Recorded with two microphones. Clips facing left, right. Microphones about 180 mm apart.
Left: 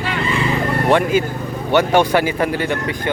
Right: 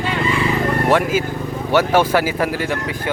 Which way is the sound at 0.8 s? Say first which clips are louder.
Left 3 dB; 5° right (ahead or behind).